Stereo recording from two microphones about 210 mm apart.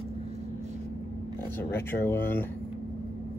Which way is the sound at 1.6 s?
10° left (ahead or behind).